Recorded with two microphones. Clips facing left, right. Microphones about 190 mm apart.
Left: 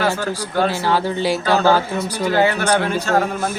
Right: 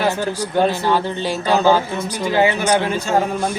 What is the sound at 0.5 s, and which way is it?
Speech, 15° right (ahead or behind).